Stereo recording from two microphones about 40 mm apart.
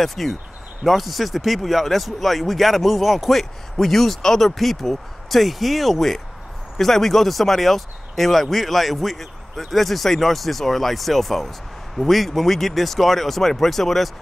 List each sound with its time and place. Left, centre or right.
0.0 s speech: centre